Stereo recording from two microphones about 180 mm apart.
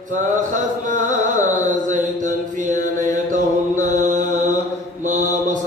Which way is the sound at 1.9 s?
45° right (ahead or behind).